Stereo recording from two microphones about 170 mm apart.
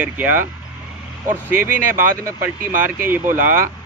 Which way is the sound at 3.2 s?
50° right (ahead or behind).